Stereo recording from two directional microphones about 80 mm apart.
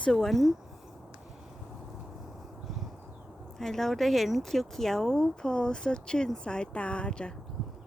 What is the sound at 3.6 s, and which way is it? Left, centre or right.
Speech, centre.